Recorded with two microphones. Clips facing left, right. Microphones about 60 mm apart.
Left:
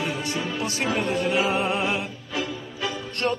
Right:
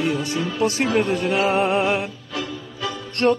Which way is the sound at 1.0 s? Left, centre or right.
Right.